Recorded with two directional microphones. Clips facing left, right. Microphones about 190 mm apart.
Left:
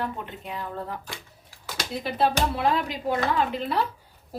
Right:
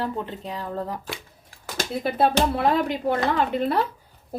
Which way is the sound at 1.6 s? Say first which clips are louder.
Right 5 dB; 50° right (ahead or behind).